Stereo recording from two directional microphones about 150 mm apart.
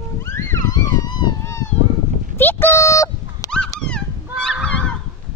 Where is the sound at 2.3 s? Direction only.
15° left (ahead or behind).